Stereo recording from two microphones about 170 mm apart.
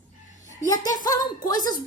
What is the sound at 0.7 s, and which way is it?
Speech, 20° left (ahead or behind).